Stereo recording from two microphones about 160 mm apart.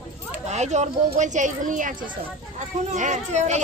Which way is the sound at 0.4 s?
45° right (ahead or behind).